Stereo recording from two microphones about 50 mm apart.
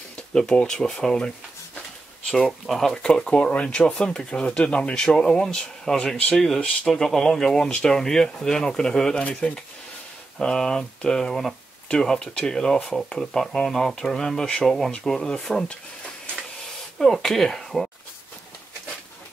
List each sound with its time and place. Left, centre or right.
0.3 s speech: centre
2.6 s speech: centre
3.0 s speech: centre
17.0 s speech: centre